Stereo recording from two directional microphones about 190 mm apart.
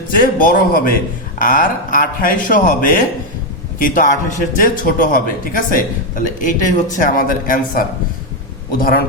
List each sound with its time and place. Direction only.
0.1 s a man's voice: 45° left (ahead or behind)